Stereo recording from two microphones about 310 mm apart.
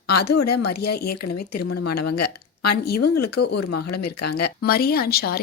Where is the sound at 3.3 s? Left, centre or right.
Left.